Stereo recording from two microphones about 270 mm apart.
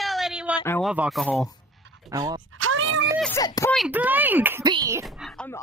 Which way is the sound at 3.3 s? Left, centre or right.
Centre.